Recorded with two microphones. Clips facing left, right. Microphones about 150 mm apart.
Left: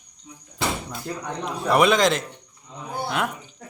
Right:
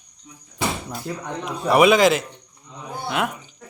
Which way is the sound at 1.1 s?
5° right (ahead or behind).